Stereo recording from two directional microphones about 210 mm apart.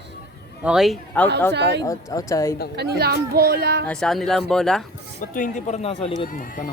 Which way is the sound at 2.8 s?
50° right (ahead or behind).